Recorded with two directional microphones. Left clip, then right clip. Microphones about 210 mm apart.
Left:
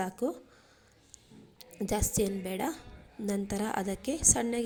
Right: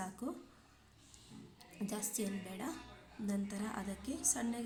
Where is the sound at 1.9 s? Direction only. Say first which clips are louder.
Left 12 dB; 30° left (ahead or behind).